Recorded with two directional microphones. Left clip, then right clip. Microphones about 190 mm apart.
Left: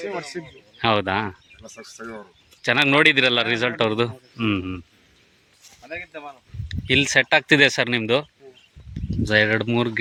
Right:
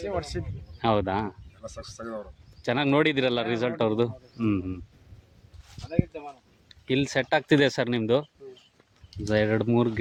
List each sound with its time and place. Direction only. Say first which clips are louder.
0.0 s speech: left 2 dB; 15° right (ahead or behind)
0.8 s a man's voice: left 5 dB; 5° right (ahead or behind)
2.0 s speech: even; 20° right (ahead or behind)
2.6 s a man's voice: left 7 dB; 5° right (ahead or behind)
6.7 s speech: left 8 dB; centre (ahead or behind)